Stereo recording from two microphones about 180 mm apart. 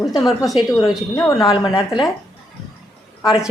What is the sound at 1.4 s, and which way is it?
Speech, 25° left (ahead or behind).